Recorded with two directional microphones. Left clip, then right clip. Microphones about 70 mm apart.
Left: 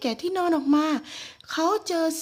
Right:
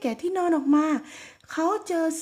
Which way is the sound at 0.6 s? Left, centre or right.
Right.